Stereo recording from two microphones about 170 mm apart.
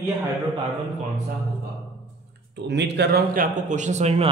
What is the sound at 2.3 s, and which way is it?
A man's voice, 90° right.